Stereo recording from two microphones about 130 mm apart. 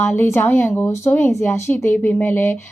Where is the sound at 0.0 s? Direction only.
20° left (ahead or behind).